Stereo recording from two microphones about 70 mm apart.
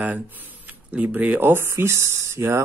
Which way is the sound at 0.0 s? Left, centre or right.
Right.